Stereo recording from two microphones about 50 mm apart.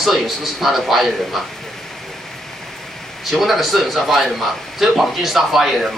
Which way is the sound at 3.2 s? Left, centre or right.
Centre.